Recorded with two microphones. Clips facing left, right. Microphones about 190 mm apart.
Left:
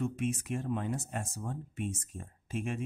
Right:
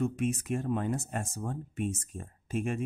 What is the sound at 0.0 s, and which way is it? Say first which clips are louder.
Speech: right 3 dB; 45° right (ahead or behind).